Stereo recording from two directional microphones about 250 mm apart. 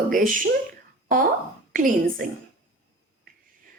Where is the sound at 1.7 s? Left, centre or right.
Right.